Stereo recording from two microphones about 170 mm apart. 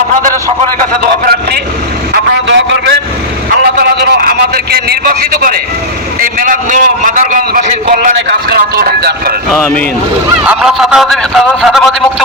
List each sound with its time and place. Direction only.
0.8 s a man's voice: 60° right (ahead or behind)
2.1 s a sound: 85° right
3.6 s a sound: 65° right (ahead or behind)
6.1 s a man's voice: 55° right (ahead or behind)
9.5 s speech: 5° left (ahead or behind)
10.4 s speech: 5° right (ahead or behind)